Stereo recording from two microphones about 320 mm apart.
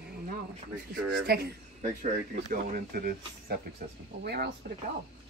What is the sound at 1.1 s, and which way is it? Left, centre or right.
Speech, right.